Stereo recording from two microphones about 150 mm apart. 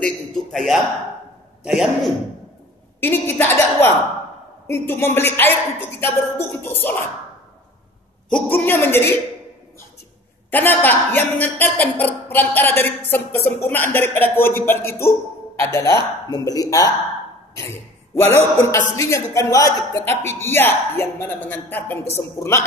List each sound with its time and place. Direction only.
0.0 s a man's voice: 5° left (ahead or behind)
3.0 s speech: 15° left (ahead or behind)
8.5 s speech: 15° left (ahead or behind)
10.5 s speech: 10° left (ahead or behind)
18.1 s a man's voice: 15° left (ahead or behind)